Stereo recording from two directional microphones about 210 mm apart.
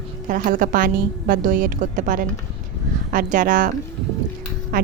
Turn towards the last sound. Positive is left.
turn(degrees=-45)  # may be behind; listen again after turning